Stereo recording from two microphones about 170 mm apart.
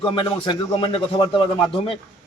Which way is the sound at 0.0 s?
30° left (ahead or behind).